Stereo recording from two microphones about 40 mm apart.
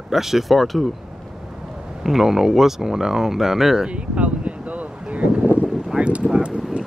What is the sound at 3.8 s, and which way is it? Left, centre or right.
Wind, right.